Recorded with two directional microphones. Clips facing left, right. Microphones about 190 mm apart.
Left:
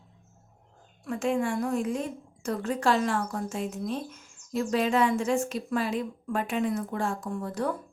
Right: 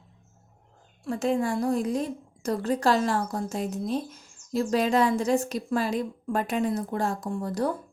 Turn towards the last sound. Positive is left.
turn(degrees=-35)  # may be behind; listen again after turning